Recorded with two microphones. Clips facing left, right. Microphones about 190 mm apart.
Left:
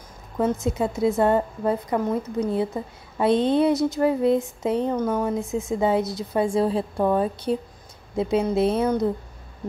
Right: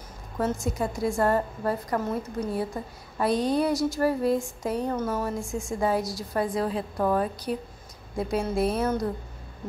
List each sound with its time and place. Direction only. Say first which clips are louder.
0.6 s a woman's voice: left 5 dB; 20° left (ahead or behind)
2.5 s a woman's voice: left 5 dB; 25° left (ahead or behind)